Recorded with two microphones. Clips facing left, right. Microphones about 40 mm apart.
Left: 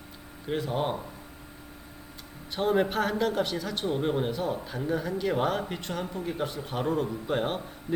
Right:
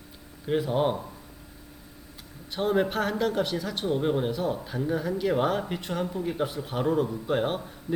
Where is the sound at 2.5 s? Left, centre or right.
Centre.